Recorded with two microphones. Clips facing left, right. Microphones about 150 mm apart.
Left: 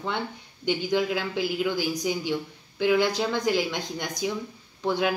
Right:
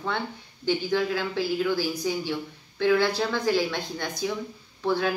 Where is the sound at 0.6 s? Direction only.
15° left (ahead or behind).